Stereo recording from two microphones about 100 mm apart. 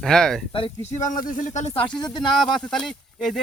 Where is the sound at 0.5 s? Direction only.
65° left (ahead or behind).